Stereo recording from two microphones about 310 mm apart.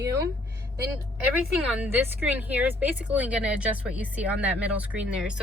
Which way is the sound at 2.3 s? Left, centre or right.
Centre.